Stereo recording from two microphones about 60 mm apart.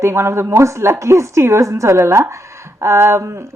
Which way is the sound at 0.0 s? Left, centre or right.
Right.